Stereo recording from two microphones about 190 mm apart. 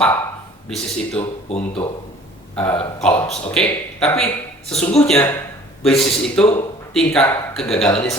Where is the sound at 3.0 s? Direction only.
5° left (ahead or behind).